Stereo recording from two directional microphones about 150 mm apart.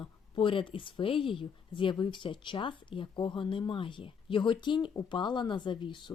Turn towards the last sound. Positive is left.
turn(degrees=30)  # may be behind; listen again after turning